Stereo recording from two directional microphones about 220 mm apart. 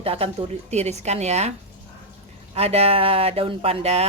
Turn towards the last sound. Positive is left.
turn(degrees=-30)  # may be behind; listen again after turning